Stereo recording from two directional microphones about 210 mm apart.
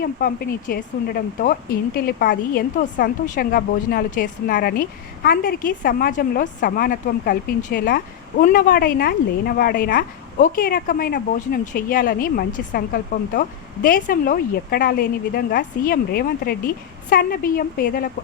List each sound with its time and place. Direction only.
0.0 s a woman's voice: 45° left (ahead or behind)